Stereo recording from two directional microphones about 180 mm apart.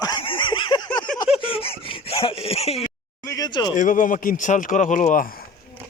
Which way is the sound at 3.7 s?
45° left (ahead or behind).